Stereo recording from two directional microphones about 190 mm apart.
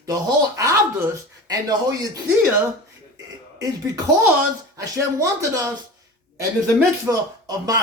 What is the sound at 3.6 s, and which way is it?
Speech, 15° right (ahead or behind).